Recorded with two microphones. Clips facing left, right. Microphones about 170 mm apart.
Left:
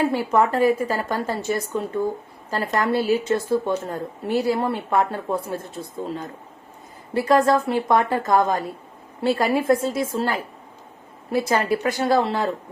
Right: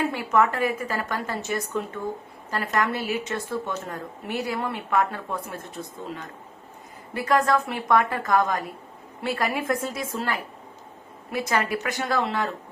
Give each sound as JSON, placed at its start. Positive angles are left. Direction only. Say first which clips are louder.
{"t": 0.0, "sound": "a woman's voice", "louder": "left 3 dB", "side_deg": 30}
{"t": 7.1, "sound": "a woman's voice", "louder": "left 4 dB", "side_deg": 30}